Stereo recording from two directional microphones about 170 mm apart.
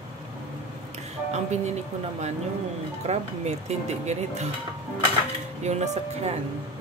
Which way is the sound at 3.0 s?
40° right (ahead or behind).